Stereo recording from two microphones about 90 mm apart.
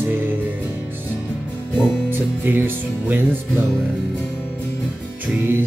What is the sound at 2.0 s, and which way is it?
Music, 20° right (ahead or behind).